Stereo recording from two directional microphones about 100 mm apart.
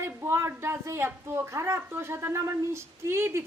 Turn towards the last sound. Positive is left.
turn(degrees=-25)  # may be behind; listen again after turning